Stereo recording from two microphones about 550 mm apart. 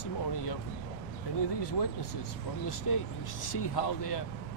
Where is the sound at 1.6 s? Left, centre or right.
Left.